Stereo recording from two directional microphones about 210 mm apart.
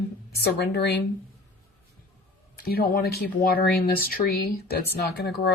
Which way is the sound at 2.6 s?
50° left (ahead or behind).